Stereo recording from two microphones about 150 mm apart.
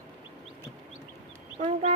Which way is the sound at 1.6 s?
50° right (ahead or behind).